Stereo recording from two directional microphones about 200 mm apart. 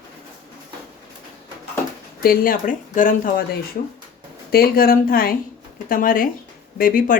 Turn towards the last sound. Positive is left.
turn(degrees=45)  # may be behind; listen again after turning